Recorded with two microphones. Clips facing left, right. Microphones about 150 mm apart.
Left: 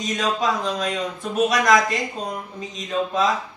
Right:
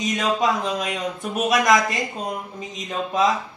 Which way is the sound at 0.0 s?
5° right (ahead or behind).